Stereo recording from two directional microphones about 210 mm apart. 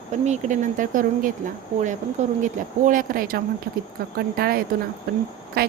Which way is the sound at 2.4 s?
40° right (ahead or behind).